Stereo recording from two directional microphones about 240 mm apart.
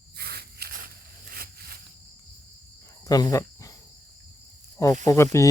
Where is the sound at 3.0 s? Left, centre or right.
Centre.